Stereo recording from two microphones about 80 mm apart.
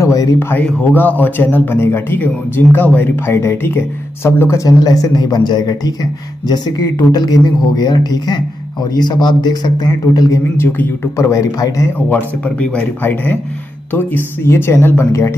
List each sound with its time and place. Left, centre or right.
0.0 s a sound: left
0.9 s speech: left
4.6 s speech: left
7.1 s speech: left
10.1 s speech: left
10.6 s speech: left
12.1 s speech: centre; by 15.3 s left